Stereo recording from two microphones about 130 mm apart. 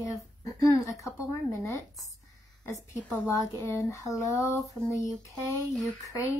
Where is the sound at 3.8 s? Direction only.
25° left (ahead or behind).